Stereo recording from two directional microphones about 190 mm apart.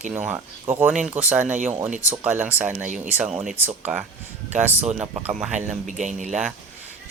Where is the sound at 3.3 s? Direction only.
45° right (ahead or behind).